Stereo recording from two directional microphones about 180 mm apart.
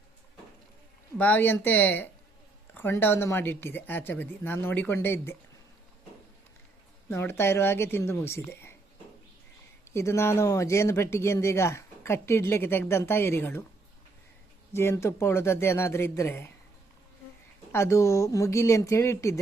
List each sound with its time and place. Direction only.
1.2 s speech: 10° left (ahead or behind)
7.1 s speech: 15° left (ahead or behind)
9.9 s speech: 15° left (ahead or behind)
14.7 s speech: 15° left (ahead or behind)
17.7 s speech: 15° left (ahead or behind)